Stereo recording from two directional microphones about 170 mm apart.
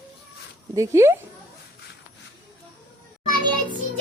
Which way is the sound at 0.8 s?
15° right (ahead or behind).